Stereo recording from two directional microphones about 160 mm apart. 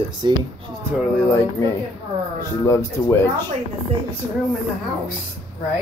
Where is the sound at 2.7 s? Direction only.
15° left (ahead or behind).